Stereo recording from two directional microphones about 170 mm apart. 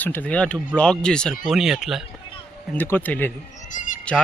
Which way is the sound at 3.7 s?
50° left (ahead or behind).